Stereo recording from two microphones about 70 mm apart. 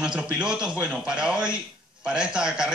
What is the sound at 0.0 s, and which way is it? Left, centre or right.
A man's voice, centre.